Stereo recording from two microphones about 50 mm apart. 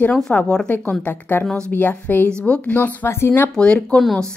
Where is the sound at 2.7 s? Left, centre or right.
Left.